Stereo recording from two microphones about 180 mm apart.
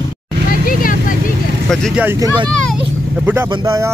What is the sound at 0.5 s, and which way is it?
Vehicle, 50° left (ahead or behind).